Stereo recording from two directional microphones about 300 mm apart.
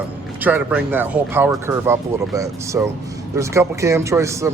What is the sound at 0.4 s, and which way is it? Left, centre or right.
Speech, centre.